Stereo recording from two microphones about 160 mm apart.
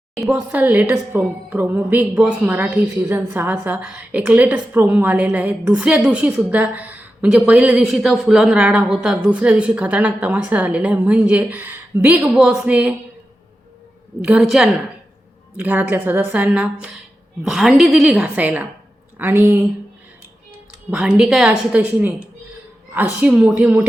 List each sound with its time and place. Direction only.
0.3 s a woman's voice: 10° right (ahead or behind)
14.3 s a woman's voice: 5° right (ahead or behind)
20.9 s a woman's voice: 5° right (ahead or behind)